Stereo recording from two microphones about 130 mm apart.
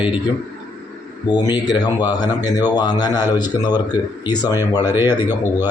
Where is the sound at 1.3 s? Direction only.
35° left (ahead or behind).